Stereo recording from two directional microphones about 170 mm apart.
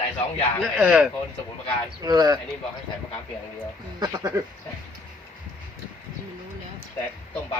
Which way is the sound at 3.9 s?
25° right (ahead or behind).